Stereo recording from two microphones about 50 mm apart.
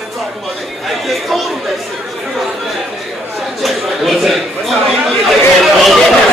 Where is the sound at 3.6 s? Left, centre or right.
Centre.